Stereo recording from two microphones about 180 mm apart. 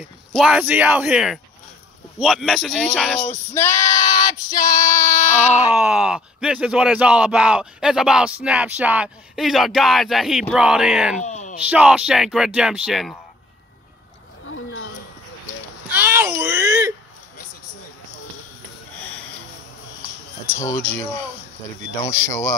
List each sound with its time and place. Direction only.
0.3 s speech: centre (ahead or behind)
3.3 s female singing: 15° left (ahead or behind)
5.4 s groan: 40° left (ahead or behind)
5.7 s speech: 5° right (ahead or behind)
11.1 s a sound: 40° left (ahead or behind)
11.7 s speech: 5° right (ahead or behind)
14.4 s a sound: 90° left
15.9 s a sound: 10° right (ahead or behind)
20.4 s speech: 20° left (ahead or behind)